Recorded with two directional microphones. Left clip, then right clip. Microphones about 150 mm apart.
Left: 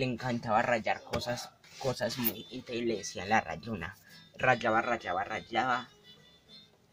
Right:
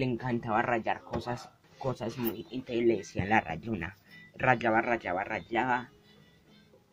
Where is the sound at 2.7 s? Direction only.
10° right (ahead or behind); by 4.8 s 5° left (ahead or behind).